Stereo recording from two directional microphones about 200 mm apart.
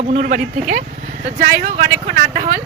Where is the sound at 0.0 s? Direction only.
35° right (ahead or behind).